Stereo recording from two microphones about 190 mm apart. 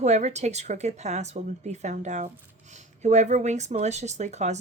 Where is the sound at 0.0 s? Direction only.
35° right (ahead or behind).